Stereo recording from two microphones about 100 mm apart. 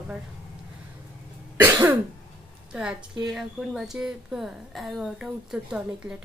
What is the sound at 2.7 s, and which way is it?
A woman's voice, 5° right (ahead or behind).